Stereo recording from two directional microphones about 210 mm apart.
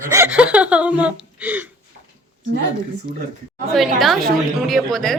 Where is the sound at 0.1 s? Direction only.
10° right (ahead or behind).